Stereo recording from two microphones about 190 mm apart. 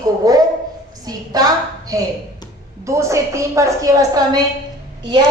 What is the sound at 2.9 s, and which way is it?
A woman's voice, 15° right (ahead or behind).